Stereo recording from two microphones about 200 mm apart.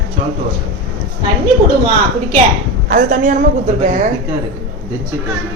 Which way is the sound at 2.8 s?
45° right (ahead or behind).